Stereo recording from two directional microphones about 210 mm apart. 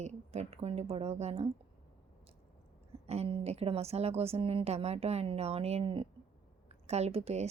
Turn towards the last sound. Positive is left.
turn(degrees=-30)  # may be behind; listen again after turning